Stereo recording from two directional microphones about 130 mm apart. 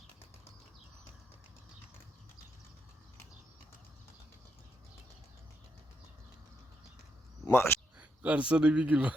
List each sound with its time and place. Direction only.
7.5 s speech: 20° left (ahead or behind)
7.9 s a man's voice: 10° right (ahead or behind)